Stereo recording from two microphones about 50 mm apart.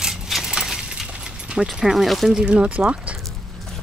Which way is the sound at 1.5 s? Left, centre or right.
Centre.